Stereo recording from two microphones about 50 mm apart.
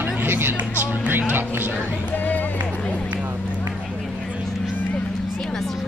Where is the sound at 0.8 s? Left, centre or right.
Right.